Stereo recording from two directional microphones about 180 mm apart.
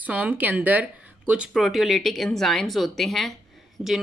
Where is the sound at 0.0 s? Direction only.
10° right (ahead or behind).